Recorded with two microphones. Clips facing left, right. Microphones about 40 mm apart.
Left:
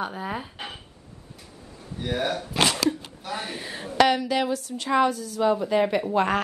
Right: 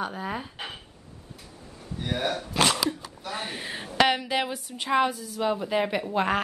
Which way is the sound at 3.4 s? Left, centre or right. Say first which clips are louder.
Left 1 dB; centre.